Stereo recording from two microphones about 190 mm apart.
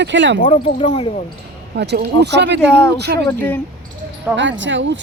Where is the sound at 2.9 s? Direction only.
60° right (ahead or behind).